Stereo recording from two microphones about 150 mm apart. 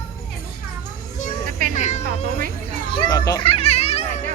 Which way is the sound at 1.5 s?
65° right (ahead or behind).